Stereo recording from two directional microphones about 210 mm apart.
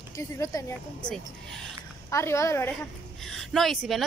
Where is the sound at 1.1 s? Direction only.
Centre (ahead or behind).